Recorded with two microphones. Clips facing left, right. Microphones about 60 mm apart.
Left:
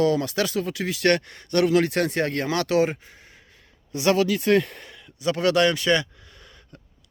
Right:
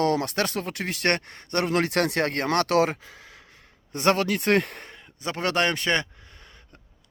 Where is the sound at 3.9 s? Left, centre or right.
Right.